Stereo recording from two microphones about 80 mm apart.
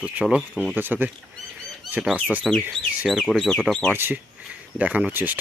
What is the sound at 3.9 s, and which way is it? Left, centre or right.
Speech, right.